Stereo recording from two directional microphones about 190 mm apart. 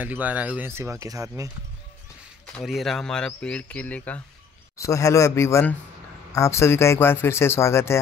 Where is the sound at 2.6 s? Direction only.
Centre (ahead or behind).